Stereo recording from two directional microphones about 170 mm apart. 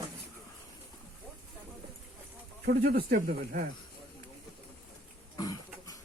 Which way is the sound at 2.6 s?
65° right (ahead or behind).